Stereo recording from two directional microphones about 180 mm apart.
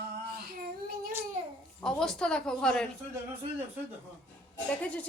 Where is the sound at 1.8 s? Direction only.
5° left (ahead or behind).